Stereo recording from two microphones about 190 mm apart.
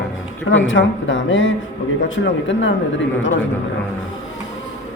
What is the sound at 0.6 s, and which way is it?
A man's voice, 85° left.